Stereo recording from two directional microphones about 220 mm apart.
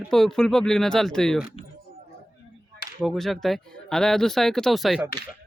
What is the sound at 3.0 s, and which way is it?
Speech, centre (ahead or behind).